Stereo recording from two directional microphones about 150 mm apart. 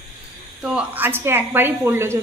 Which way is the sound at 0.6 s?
10° right (ahead or behind).